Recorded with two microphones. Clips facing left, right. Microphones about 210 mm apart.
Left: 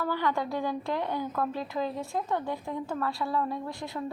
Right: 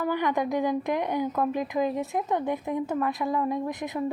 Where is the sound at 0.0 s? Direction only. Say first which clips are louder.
Right 3 dB; 15° right (ahead or behind).